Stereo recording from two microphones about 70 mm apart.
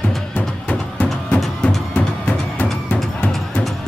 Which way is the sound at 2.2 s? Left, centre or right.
Centre.